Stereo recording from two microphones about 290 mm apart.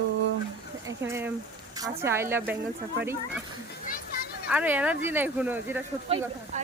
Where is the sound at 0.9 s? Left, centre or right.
Centre.